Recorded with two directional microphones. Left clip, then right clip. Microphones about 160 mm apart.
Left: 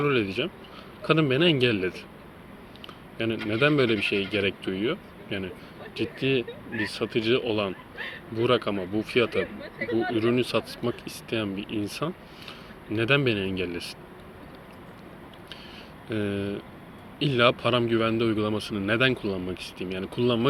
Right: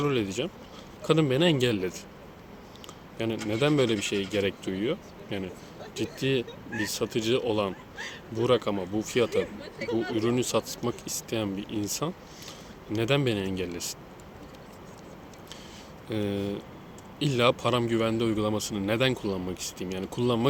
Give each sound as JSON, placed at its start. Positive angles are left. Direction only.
{"t": 0.0, "sound": "speech", "side_deg": -15}
{"t": 3.2, "sound": "speech", "side_deg": -10}
{"t": 16.0, "sound": "speech", "side_deg": -10}